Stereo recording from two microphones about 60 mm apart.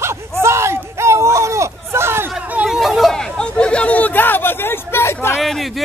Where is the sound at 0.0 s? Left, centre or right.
Right.